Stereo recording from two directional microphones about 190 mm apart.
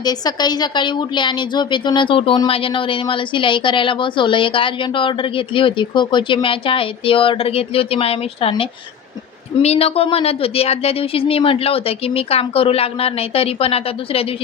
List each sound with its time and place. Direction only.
0.0 s a woman's voice: 20° left (ahead or behind)